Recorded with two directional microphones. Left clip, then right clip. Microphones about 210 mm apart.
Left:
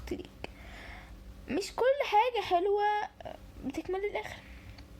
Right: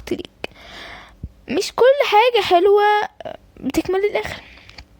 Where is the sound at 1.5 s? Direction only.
40° right (ahead or behind).